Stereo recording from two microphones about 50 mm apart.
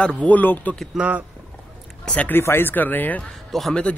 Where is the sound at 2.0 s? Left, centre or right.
Centre.